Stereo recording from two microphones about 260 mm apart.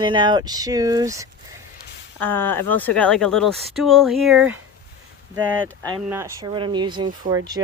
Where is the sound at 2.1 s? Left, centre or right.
Centre.